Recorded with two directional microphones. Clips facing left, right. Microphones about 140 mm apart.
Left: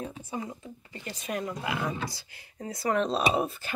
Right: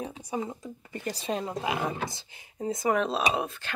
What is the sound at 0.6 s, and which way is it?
Speech, 40° right (ahead or behind).